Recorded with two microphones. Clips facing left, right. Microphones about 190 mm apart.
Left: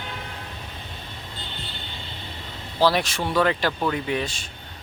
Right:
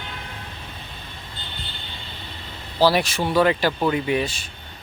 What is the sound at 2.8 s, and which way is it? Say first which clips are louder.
Speech: right 2 dB; 5° right (ahead or behind).